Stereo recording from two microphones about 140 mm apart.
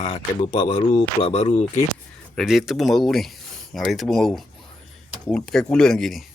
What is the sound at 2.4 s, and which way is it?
Speech, centre (ahead or behind).